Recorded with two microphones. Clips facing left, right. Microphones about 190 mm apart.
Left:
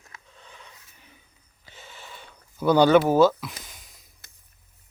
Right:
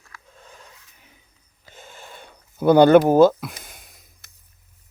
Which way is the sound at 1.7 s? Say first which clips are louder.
Right 3 dB; 50° right (ahead or behind).